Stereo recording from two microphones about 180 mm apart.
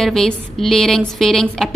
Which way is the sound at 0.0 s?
Centre (ahead or behind).